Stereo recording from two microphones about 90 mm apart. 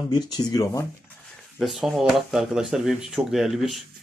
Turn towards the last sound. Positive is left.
turn(degrees=-5)  # may be behind; listen again after turning